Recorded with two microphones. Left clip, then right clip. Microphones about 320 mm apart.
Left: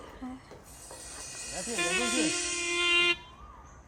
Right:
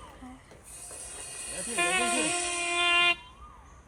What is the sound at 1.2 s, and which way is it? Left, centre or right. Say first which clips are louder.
Music: left 1 dB; centre.